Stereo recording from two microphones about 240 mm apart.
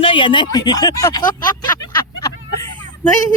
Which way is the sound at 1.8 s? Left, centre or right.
Centre.